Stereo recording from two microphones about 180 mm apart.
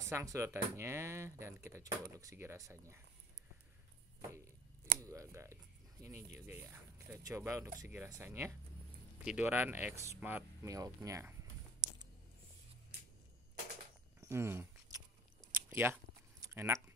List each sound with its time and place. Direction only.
0.1 s speech: 15° right (ahead or behind)
5.0 s speech: 15° right (ahead or behind)
14.2 s a sound: 15° right (ahead or behind)
15.5 s biting: 10° right (ahead or behind)